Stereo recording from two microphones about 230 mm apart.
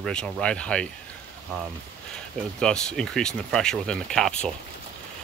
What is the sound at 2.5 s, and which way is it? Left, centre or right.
Speech, centre.